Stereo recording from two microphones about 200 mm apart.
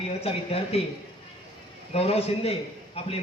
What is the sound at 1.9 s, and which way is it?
A man's voice, 30° left (ahead or behind).